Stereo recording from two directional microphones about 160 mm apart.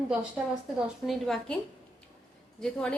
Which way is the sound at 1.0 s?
Centre (ahead or behind).